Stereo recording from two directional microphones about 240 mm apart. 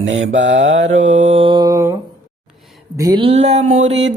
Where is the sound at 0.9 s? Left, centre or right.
Right; by 2.0 s centre.